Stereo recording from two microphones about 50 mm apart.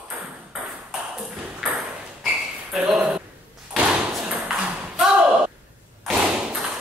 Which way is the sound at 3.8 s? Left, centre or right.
Right.